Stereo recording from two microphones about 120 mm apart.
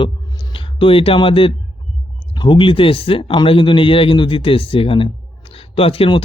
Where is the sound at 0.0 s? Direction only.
40° left (ahead or behind).